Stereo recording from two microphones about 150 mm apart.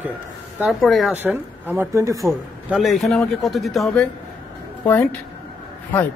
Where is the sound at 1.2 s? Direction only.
15° right (ahead or behind).